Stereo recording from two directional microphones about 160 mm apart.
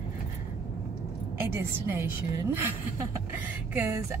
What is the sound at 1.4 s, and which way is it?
A woman's voice, 15° right (ahead or behind).